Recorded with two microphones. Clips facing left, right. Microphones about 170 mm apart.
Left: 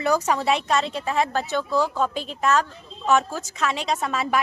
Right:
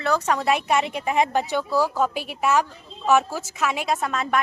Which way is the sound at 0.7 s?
15° right (ahead or behind).